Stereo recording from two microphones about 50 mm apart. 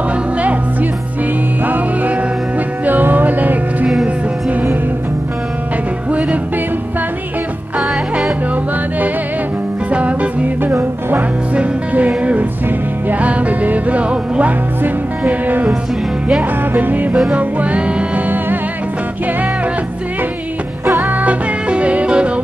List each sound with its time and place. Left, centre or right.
2.8 s music: right
9.8 s music: right
10.6 s music: right
11.5 s music: right
14.8 s music: right
16.7 s music: right
21.0 s music: right